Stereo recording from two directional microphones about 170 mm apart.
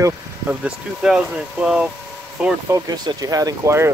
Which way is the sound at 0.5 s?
5° right (ahead or behind).